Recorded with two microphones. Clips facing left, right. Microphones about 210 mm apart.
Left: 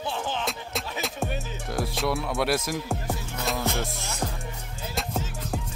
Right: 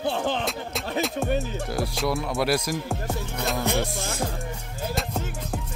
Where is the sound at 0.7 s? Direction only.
Centre (ahead or behind).